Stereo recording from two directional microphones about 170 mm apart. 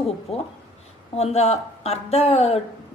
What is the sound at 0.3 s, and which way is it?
A woman's voice, 35° left (ahead or behind).